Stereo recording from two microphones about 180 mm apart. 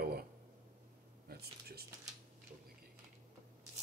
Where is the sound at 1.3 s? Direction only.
60° right (ahead or behind).